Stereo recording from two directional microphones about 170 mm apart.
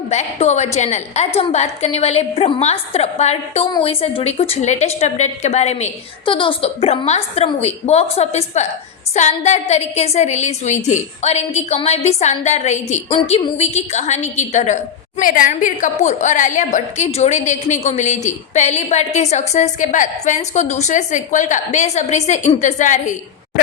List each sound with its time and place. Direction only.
0.1 s a woman's voice: 40° left (ahead or behind)
15.2 s a woman's voice: 55° left (ahead or behind)